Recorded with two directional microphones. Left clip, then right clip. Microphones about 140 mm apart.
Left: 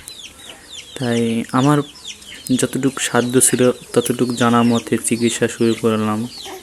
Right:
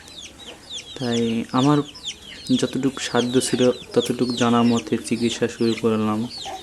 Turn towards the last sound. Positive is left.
turn(degrees=20)  # may be behind; listen again after turning